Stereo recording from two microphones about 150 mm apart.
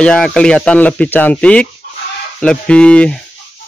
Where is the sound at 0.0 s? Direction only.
5° left (ahead or behind).